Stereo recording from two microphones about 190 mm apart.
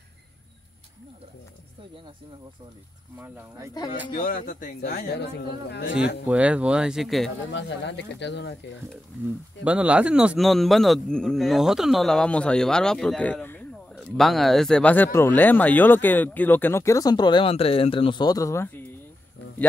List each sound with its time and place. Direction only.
3.2 s speech: 15° right (ahead or behind)
4.1 s a man's voice: 50° left (ahead or behind)
6.2 s a man's voice: 5° right (ahead or behind)
7.2 s speech: 70° left (ahead or behind)
9.7 s a man's voice: 5° right (ahead or behind); by 18.9 s 15° left (ahead or behind)